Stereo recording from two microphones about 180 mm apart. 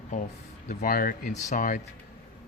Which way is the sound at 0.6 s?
50° left (ahead or behind).